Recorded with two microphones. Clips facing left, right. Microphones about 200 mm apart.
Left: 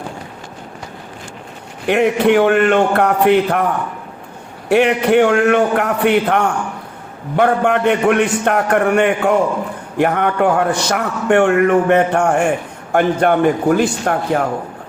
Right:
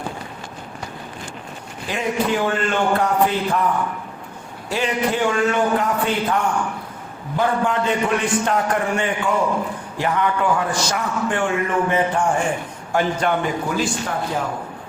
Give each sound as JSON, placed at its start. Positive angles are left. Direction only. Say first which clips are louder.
{"t": 1.9, "sound": "a man's voice", "louder": "left 9 dB", "side_deg": 65}
{"t": 4.7, "sound": "a man's voice", "louder": "left 9 dB", "side_deg": 65}